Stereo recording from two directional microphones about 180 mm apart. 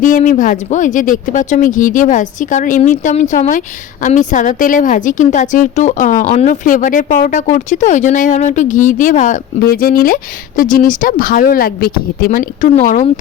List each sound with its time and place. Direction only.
0.0 s a woman's voice: 45° left (ahead or behind)